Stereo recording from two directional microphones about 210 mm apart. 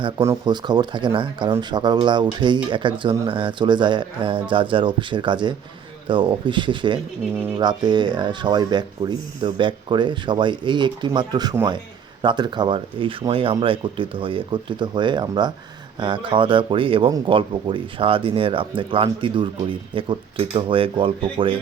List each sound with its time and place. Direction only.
0.0 s speech: 15° right (ahead or behind)